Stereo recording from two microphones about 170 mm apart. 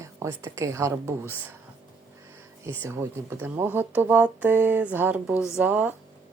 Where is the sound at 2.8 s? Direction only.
15° right (ahead or behind).